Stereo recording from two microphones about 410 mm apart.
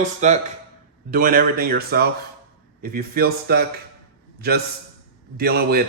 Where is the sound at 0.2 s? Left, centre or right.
Centre.